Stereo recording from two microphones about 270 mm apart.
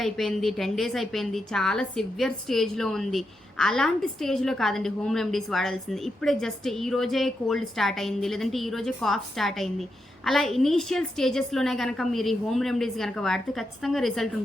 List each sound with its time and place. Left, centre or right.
0.0 s a woman's voice: centre